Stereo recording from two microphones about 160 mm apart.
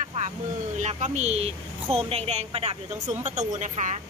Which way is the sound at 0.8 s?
45° right (ahead or behind).